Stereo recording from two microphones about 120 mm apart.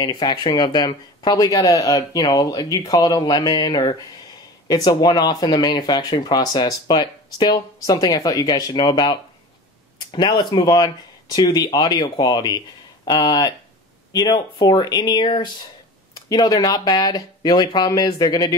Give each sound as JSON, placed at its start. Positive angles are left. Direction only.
{"t": 0.0, "sound": "speech", "side_deg": 35}
{"t": 16.2, "sound": "speech", "side_deg": 30}